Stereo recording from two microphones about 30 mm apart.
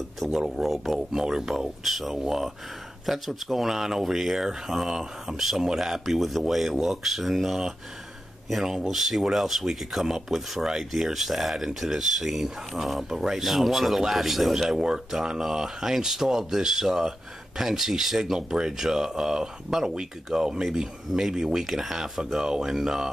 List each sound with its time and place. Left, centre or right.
0.2 s speech: centre
0.6 s speech: centre
1.2 s speech: right
1.6 s speech: centre
8.8 s speech: centre